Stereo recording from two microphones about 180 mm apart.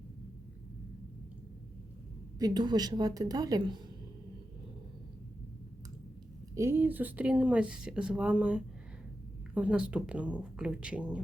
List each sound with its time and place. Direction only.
2.4 s a woman's voice: 25° right (ahead or behind)
6.5 s speech: 15° right (ahead or behind)